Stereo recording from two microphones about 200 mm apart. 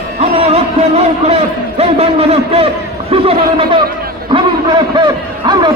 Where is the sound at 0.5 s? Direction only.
30° right (ahead or behind).